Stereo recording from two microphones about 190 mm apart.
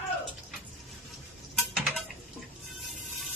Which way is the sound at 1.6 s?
Centre (ahead or behind).